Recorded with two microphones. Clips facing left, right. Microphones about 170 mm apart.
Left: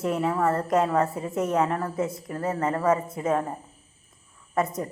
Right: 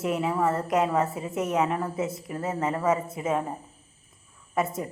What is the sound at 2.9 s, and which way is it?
Speech, 25° right (ahead or behind).